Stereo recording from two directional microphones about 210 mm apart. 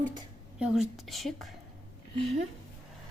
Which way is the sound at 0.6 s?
Centre (ahead or behind).